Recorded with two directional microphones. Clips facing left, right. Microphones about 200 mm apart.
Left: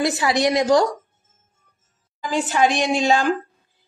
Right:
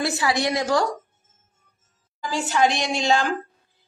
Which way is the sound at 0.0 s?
20° left (ahead or behind).